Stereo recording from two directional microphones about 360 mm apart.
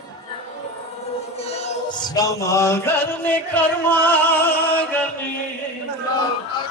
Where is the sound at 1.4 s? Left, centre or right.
Centre.